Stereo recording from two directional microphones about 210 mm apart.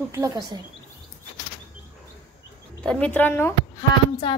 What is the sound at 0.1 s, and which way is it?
Speech, 15° right (ahead or behind).